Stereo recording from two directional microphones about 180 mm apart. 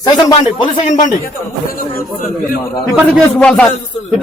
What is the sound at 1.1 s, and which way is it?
Speech, 50° left (ahead or behind).